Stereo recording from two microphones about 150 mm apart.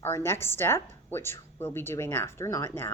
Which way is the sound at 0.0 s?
15° left (ahead or behind).